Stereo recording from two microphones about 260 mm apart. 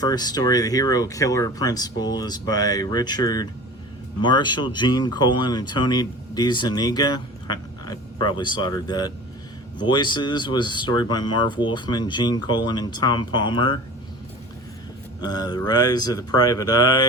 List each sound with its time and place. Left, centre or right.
0.0 s speech: centre
15.2 s speech: centre